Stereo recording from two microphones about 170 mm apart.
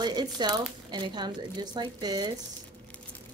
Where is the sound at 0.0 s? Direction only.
25° right (ahead or behind).